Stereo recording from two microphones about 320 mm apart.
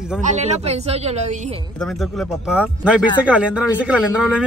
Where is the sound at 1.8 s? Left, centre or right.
Centre.